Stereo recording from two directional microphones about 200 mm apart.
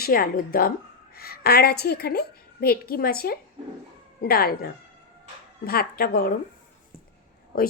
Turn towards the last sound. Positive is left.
turn(degrees=45)  # may be behind; listen again after turning